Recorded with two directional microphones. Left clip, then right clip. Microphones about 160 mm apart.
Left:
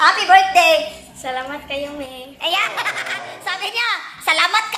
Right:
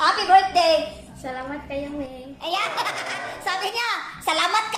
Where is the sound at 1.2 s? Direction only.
5° left (ahead or behind).